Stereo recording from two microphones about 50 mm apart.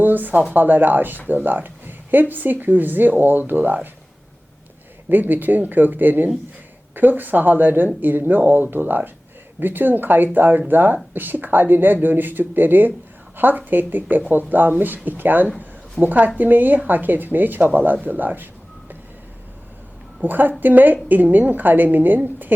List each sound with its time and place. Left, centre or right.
0.0 s speech: right
5.0 s speech: right
20.2 s speech: right